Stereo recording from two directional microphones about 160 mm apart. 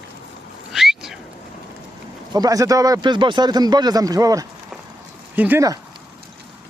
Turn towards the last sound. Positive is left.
turn(degrees=-10)  # may be behind; listen again after turning